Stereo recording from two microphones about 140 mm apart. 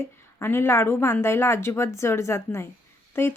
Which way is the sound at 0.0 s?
15° left (ahead or behind).